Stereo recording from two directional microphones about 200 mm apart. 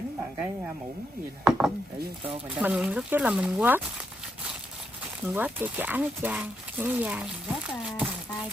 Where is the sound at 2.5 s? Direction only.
5° right (ahead or behind).